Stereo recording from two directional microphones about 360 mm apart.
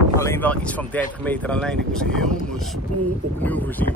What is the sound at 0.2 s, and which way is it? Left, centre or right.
Speech, centre.